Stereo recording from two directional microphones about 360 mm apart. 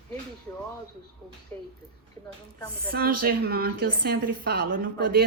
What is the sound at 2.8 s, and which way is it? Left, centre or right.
A woman's voice, right.